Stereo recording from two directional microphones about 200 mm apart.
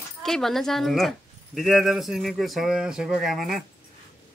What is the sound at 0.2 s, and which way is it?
Speech, centre (ahead or behind).